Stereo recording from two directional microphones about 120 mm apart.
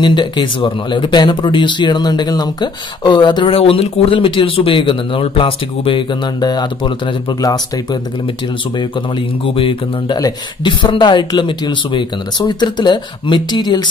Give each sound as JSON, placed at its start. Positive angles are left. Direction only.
{"t": 0.0, "sound": "speech", "side_deg": 40}
{"t": 9.4, "sound": "speech", "side_deg": 50}
{"t": 10.1, "sound": "speech", "side_deg": 35}